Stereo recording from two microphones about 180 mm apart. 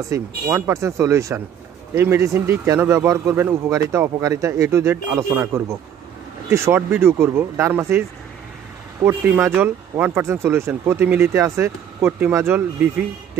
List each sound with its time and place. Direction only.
0.1 s speech: 15° right (ahead or behind)
9.0 s speech: 10° right (ahead or behind)